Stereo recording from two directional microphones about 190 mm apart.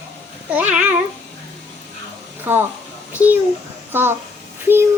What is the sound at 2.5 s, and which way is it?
A child's voice, 10° right (ahead or behind).